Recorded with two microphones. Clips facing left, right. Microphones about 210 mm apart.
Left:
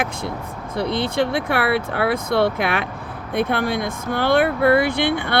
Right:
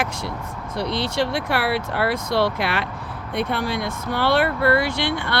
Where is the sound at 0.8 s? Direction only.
55° left (ahead or behind).